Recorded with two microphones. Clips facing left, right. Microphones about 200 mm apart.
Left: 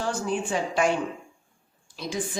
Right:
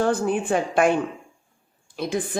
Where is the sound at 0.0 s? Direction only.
55° right (ahead or behind).